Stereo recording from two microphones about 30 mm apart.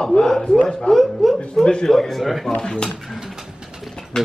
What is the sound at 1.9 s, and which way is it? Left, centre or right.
Speech, centre.